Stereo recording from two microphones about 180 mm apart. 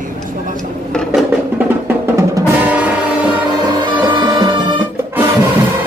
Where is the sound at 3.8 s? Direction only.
25° right (ahead or behind).